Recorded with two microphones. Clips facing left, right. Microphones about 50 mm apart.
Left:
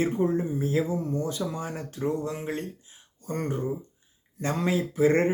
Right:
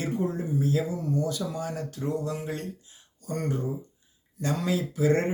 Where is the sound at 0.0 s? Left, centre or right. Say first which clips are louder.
Left 4 dB; left.